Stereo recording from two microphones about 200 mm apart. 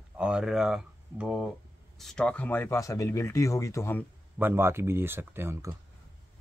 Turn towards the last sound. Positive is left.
turn(degrees=-15)  # may be behind; listen again after turning